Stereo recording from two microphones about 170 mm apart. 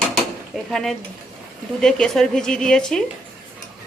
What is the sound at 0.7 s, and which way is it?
Speech, centre (ahead or behind).